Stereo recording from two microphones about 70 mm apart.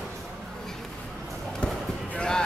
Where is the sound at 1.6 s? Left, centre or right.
Centre.